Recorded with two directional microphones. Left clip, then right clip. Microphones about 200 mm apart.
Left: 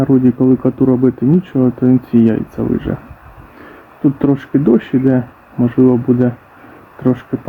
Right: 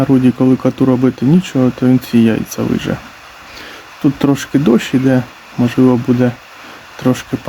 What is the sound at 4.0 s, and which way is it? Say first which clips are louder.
Speech: even; 20° right (ahead or behind).